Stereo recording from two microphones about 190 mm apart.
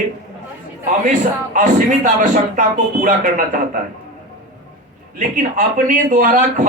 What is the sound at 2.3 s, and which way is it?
Speech, 45° right (ahead or behind).